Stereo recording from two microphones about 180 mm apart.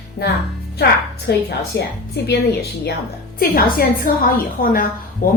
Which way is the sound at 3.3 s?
55° left (ahead or behind).